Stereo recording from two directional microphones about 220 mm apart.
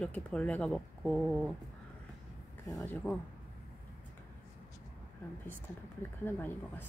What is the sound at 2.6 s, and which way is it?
Speech, 5° left (ahead or behind).